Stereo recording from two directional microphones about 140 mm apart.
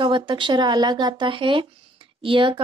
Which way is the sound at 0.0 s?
35° right (ahead or behind).